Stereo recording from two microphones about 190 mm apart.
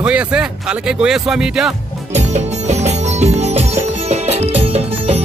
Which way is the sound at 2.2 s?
35° right (ahead or behind).